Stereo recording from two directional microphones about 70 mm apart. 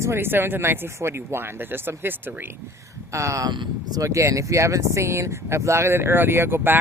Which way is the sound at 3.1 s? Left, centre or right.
Right.